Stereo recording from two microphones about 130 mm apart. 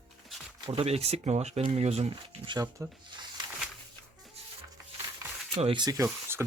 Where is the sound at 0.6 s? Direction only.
45° right (ahead or behind).